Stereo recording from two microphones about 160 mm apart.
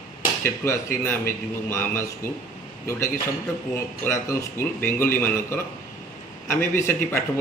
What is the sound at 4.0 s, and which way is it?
A man's voice, 15° left (ahead or behind).